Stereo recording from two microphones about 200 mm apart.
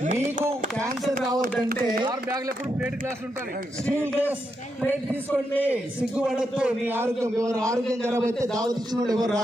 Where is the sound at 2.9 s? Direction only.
45° right (ahead or behind).